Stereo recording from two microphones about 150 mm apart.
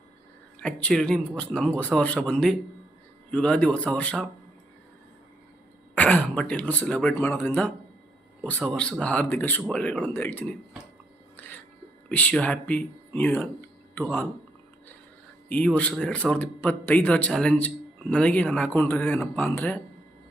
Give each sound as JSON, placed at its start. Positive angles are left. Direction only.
{"t": 0.6, "sound": "speech", "side_deg": 5}
{"t": 6.0, "sound": "speech", "side_deg": 10}
{"t": 11.3, "sound": "music", "side_deg": 10}
{"t": 12.0, "sound": "speech", "side_deg": 10}
{"t": 15.4, "sound": "speech", "side_deg": 10}